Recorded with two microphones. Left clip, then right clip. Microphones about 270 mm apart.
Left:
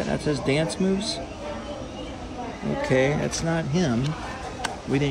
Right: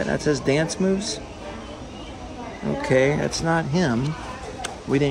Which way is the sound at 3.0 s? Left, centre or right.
Centre.